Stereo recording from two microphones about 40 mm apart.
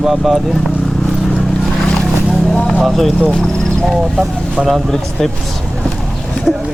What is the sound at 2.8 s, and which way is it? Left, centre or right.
Speech, centre.